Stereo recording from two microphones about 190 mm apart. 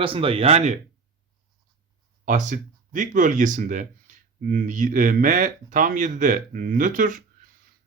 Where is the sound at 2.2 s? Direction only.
40° right (ahead or behind).